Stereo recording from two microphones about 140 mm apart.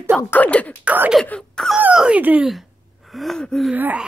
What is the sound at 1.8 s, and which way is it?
Speech, 5° right (ahead or behind).